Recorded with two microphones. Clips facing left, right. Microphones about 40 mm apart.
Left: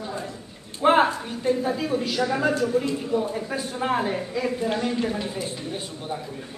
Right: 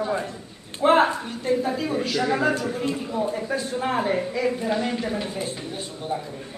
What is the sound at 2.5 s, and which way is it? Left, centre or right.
Speech, right.